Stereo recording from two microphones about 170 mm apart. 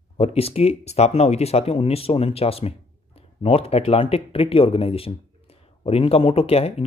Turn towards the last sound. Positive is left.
turn(degrees=35)  # may be behind; listen again after turning